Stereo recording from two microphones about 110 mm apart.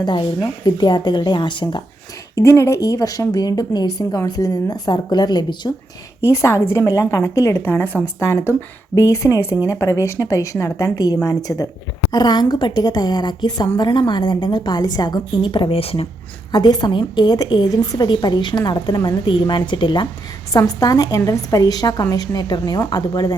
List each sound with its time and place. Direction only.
0.0 s a woman's voice: 45° left (ahead or behind)
2.3 s a woman's voice: 25° left (ahead or behind)
6.2 s a woman's voice: 25° left (ahead or behind); by 16.0 s 60° left (ahead or behind)
16.5 s a woman's voice: 40° left (ahead or behind)
20.5 s a woman's voice: 30° left (ahead or behind)